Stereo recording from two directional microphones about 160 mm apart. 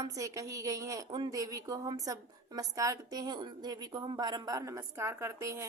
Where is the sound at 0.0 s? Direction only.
20° right (ahead or behind).